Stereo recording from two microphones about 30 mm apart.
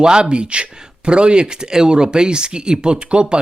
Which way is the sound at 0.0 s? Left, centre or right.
Right.